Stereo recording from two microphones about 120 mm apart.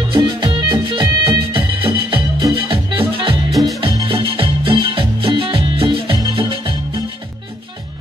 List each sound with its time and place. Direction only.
0.1 s music: 40° right (ahead or behind)
3.5 s music: centre (ahead or behind)
3.9 s music: 45° right (ahead or behind)